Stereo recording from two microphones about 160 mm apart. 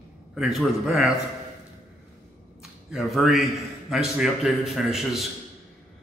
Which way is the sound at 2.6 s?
Centre (ahead or behind).